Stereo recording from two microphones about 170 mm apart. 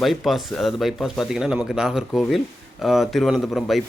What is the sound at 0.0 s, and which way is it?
Speech, centre (ahead or behind).